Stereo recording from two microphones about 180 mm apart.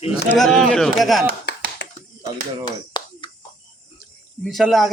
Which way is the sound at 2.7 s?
25° left (ahead or behind).